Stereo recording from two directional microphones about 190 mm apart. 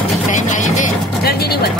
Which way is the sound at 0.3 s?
40° left (ahead or behind).